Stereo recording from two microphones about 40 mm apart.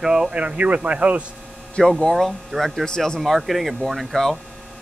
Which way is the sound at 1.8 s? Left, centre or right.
Left.